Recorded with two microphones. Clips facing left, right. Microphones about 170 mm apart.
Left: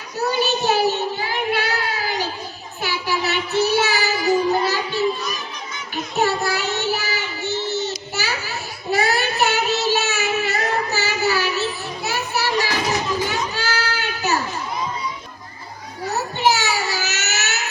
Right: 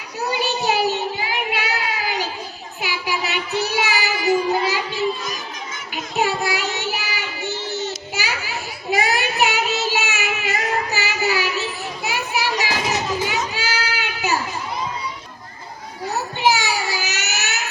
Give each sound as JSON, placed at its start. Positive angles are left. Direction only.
{"t": 0.3, "sound": "child singing", "side_deg": -15}
{"t": 5.9, "sound": "child singing", "side_deg": -15}
{"t": 12.0, "sound": "children playing", "side_deg": -15}
{"t": 16.4, "sound": "a sound", "side_deg": -15}